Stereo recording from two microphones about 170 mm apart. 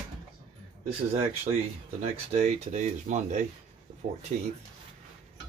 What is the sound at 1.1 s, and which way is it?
Speech, 35° right (ahead or behind).